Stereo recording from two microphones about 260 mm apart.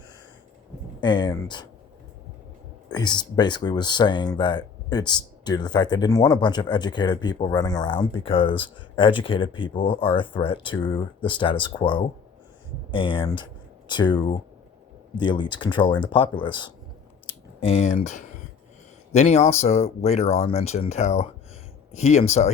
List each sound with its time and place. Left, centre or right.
1.0 s speech: centre
2.9 s speech: centre
17.2 s clicking: left
19.1 s speech: left